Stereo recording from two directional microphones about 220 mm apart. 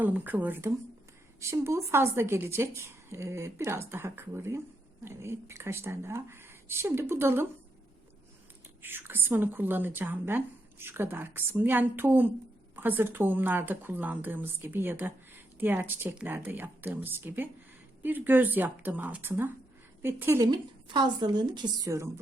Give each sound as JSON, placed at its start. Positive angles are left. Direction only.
{"t": 0.0, "sound": "a woman's voice", "side_deg": -5}
{"t": 8.8, "sound": "a woman's voice", "side_deg": -10}